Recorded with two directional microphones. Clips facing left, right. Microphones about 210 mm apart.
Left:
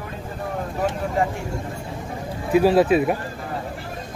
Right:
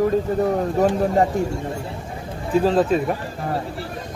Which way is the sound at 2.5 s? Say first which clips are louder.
Left 2 dB; 10° left (ahead or behind).